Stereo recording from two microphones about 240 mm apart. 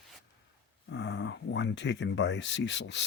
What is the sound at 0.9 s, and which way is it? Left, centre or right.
Speech, left.